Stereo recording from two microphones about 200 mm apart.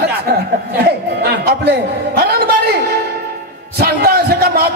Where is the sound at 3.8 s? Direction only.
50° right (ahead or behind).